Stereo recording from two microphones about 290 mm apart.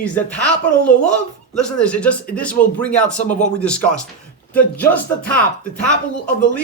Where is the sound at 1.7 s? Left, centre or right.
Centre.